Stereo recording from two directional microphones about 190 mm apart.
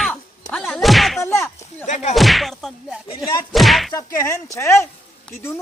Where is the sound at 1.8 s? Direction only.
40° left (ahead or behind).